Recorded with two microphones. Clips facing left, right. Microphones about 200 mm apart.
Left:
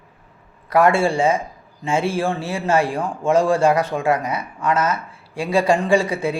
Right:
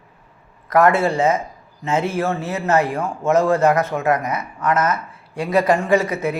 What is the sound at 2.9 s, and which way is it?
A man's voice, 15° left (ahead or behind).